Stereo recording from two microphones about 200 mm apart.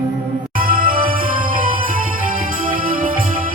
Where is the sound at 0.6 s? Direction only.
45° right (ahead or behind).